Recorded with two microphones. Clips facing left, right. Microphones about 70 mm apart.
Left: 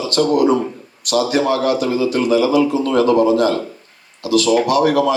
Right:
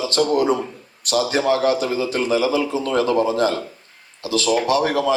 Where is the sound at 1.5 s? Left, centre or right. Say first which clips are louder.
Left 2 dB; right.